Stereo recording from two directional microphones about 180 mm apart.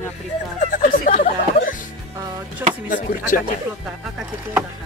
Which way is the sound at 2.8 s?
50° left (ahead or behind).